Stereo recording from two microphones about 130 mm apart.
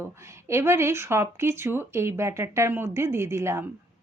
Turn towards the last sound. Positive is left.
turn(degrees=-20)  # may be behind; listen again after turning